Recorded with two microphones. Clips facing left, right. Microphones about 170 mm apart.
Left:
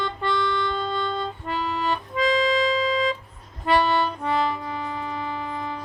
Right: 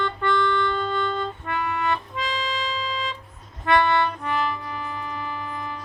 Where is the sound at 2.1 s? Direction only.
Centre (ahead or behind).